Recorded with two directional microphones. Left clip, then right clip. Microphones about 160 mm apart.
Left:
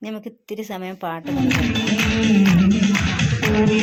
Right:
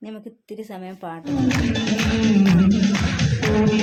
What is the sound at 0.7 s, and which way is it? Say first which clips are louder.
Speech: left 7 dB; 25° left (ahead or behind).